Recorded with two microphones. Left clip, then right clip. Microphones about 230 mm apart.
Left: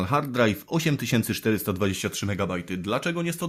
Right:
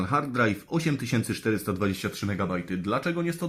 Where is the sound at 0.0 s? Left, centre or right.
Left.